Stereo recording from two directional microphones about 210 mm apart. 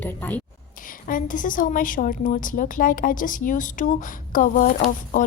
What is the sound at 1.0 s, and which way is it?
A woman's voice, 40° left (ahead or behind).